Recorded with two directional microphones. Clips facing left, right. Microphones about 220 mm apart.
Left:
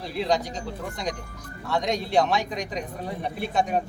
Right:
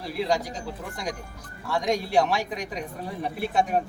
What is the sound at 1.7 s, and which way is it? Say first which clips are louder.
A man's voice: even; 5° right (ahead or behind).